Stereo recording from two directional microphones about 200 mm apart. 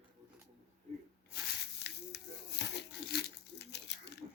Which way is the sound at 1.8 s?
55° left (ahead or behind).